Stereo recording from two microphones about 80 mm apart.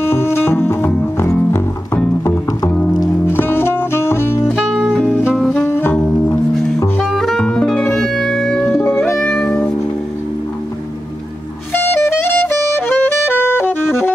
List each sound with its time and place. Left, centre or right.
0.0 s music: left
2.7 s music: centre
3.3 s music: left
5.6 s saxophone: left
7.1 s music: centre
8.7 s music: left
9.1 s music: centre
11.7 s music: left